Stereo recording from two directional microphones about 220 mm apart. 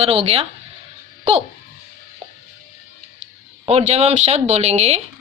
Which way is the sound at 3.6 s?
30° right (ahead or behind).